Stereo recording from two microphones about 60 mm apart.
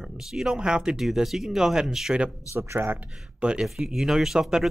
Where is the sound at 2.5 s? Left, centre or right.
Right.